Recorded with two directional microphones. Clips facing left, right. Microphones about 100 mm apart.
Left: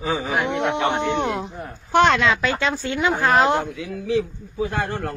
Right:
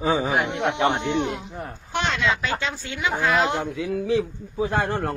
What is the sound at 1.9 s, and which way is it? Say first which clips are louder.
Speech: left 8 dB; 60° left (ahead or behind).